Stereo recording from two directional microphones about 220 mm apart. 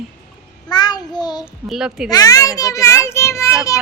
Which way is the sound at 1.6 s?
Centre (ahead or behind).